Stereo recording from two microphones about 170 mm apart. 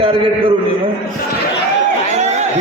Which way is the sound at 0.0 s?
30° right (ahead or behind).